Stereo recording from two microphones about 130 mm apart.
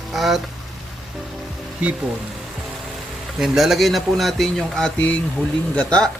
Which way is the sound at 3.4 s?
Centre (ahead or behind).